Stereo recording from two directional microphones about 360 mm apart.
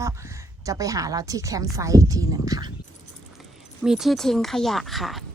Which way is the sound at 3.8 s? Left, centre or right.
Centre.